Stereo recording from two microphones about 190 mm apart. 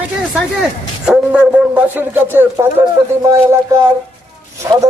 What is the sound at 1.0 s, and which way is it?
Speech, 5° right (ahead or behind).